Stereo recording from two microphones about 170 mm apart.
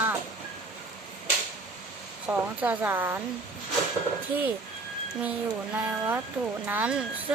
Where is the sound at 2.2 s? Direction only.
10° right (ahead or behind).